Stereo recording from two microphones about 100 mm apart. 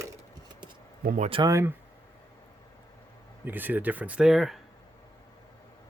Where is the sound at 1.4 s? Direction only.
30° right (ahead or behind).